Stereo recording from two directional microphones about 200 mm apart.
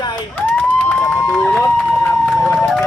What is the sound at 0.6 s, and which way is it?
Speech, 5° left (ahead or behind).